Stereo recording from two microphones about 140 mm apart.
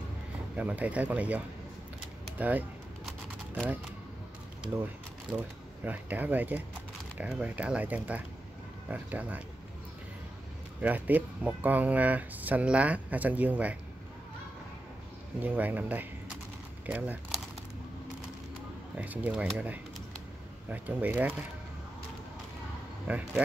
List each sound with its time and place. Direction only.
0.6 s speech: 10° right (ahead or behind)
5.3 s speech: 5° right (ahead or behind)
10.8 s speech: 10° right (ahead or behind)
15.4 s speech: 10° right (ahead or behind)
18.9 s speech: 10° right (ahead or behind)
20.7 s speech: 10° right (ahead or behind)
23.0 s speech: 10° right (ahead or behind)